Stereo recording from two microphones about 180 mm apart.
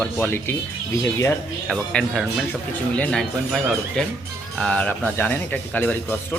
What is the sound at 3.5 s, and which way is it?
Speech, centre (ahead or behind).